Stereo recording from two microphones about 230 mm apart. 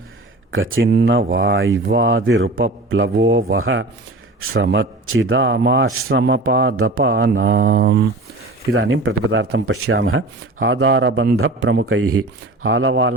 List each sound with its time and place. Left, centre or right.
0.5 s a man's voice: right
7.8 s a man's voice: right
8.7 s a man's voice: right
9.7 s a man's voice: right
11.6 s a man's voice: right
11.9 s speech: right
12.6 s a man's voice: right